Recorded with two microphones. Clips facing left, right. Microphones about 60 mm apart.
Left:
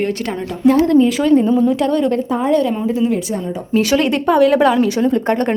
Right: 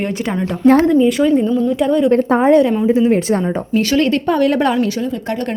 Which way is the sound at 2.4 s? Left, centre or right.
Right.